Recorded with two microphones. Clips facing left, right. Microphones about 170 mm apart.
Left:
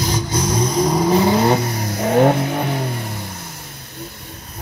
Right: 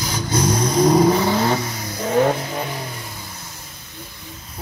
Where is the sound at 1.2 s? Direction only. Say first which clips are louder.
Left 4 dB; 15° left (ahead or behind).